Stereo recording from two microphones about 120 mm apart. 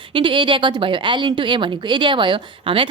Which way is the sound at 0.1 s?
45° right (ahead or behind).